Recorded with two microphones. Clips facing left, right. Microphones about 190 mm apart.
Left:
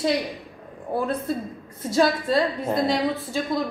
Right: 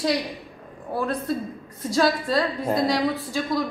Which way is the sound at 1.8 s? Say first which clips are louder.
Left 1 dB; 25° left (ahead or behind).